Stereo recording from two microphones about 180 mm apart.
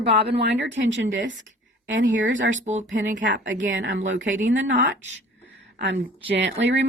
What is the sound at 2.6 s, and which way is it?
Speech, 40° right (ahead or behind).